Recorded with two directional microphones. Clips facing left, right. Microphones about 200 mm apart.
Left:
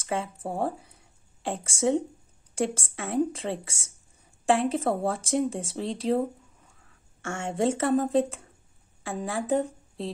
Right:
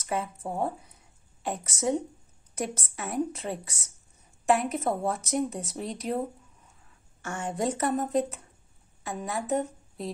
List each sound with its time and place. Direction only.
0.0 s a woman's voice: 30° left (ahead or behind)